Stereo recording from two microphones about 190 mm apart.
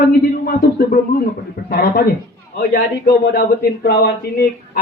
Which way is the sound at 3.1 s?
55° left (ahead or behind).